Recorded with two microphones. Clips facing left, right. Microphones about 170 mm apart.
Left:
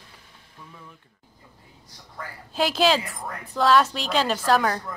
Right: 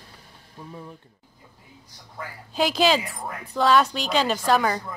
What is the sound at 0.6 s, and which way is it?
Music, 40° right (ahead or behind).